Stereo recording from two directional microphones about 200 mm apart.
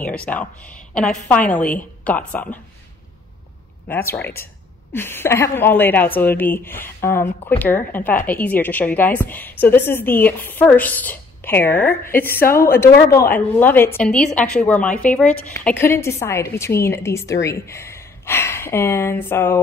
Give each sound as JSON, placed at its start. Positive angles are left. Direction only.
{"t": 0.0, "sound": "a woman's voice", "side_deg": 5}
{"t": 3.8, "sound": "a woman's voice", "side_deg": 10}
{"t": 12.3, "sound": "a woman's voice", "side_deg": 50}
{"t": 12.5, "sound": "a woman's voice", "side_deg": 10}